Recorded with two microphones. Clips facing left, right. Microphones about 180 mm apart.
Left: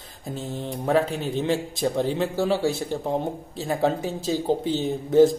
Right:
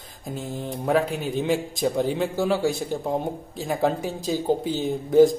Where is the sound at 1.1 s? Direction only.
10° right (ahead or behind).